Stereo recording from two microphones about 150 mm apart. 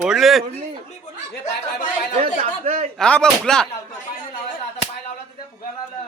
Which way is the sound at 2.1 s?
45° right (ahead or behind).